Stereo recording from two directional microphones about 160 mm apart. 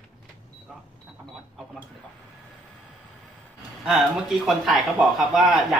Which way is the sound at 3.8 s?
Centre (ahead or behind).